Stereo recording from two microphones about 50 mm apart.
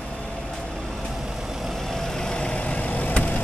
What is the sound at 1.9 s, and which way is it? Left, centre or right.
Vehicle, centre.